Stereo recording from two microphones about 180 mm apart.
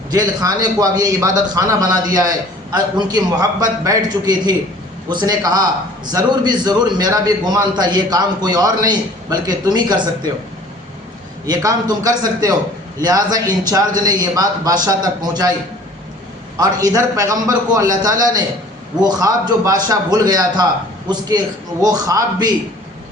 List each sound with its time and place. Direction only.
0.1 s a man's voice: 20° right (ahead or behind)
11.4 s a man's voice: 20° right (ahead or behind)
16.6 s a man's voice: 20° right (ahead or behind)